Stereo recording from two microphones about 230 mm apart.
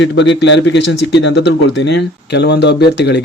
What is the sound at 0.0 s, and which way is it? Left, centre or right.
Speech, left.